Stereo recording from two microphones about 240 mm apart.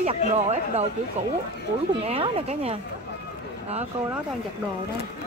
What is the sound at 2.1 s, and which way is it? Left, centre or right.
Speech, right.